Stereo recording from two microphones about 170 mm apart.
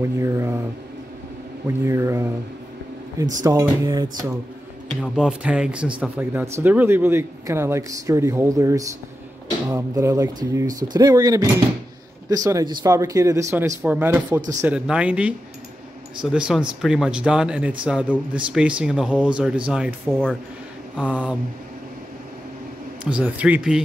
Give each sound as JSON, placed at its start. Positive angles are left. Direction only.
{"t": 0.0, "sound": "speech", "side_deg": -15}
{"t": 1.9, "sound": "speech", "side_deg": -15}
{"t": 3.4, "sound": "speech", "side_deg": -20}
{"t": 5.0, "sound": "speech", "side_deg": -5}
{"t": 20.1, "sound": "speech", "side_deg": 5}
{"t": 21.0, "sound": "speech", "side_deg": -10}
{"t": 23.0, "sound": "speech", "side_deg": -10}